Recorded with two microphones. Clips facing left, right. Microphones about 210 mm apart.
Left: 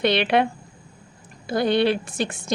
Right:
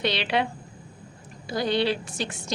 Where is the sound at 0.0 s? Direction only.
55° left (ahead or behind).